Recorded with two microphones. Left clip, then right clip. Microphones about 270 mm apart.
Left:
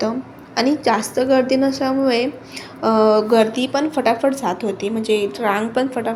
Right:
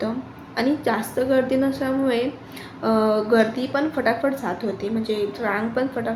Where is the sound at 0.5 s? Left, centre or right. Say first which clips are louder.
Left 5 dB; centre.